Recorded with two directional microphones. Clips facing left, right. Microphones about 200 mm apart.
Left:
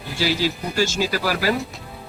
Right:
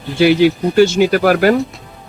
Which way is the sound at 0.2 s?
60° right (ahead or behind).